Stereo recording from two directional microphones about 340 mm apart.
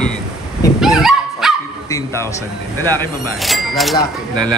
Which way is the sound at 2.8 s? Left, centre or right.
Centre.